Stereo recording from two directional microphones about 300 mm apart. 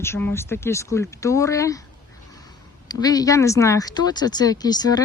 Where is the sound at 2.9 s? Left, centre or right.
Centre.